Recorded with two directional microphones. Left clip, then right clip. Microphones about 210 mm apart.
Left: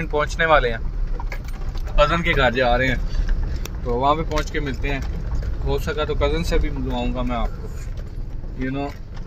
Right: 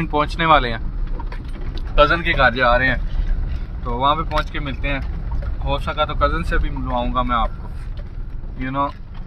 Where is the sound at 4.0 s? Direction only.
45° right (ahead or behind).